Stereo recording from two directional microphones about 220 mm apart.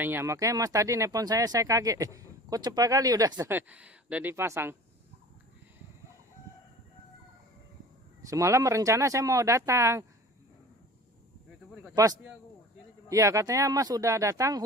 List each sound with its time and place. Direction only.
0.0 s speech: 10° right (ahead or behind)
8.3 s speech: 15° right (ahead or behind)
11.9 s a man's voice: 15° right (ahead or behind)